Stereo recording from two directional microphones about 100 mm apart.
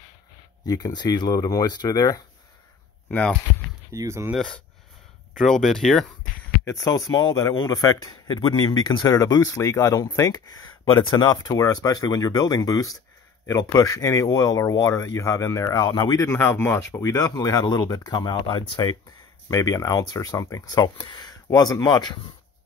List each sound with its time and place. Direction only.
0.7 s speech: 40° left (ahead or behind)
3.1 s speech: 15° left (ahead or behind)
3.9 s speech: 30° right (ahead or behind)
5.4 s speech: 5° left (ahead or behind)
6.6 s speech: 35° left (ahead or behind)
16.3 s speech: 25° left (ahead or behind); by 18.8 s 50° left (ahead or behind)
19.5 s speech: 35° left (ahead or behind)